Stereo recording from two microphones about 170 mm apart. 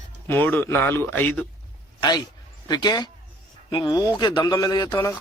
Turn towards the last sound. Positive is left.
turn(degrees=15)  # may be behind; listen again after turning